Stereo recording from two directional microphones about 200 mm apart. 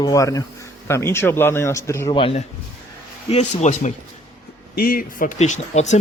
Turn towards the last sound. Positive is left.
turn(degrees=35)  # may be behind; listen again after turning